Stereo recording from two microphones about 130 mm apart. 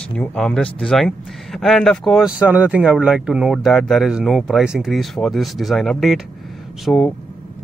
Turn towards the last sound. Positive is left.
turn(degrees=5)  # may be behind; listen again after turning